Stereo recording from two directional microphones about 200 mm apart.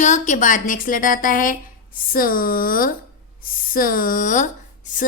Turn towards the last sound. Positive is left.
turn(degrees=40)  # may be behind; listen again after turning